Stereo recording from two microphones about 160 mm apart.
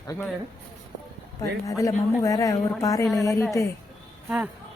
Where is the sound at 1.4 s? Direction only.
20° left (ahead or behind).